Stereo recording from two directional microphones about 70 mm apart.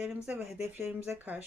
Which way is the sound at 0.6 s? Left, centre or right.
Right.